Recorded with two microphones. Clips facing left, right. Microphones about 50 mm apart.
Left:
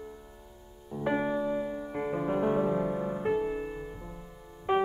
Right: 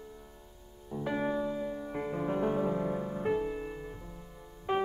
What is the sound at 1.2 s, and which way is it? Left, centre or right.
Music, centre.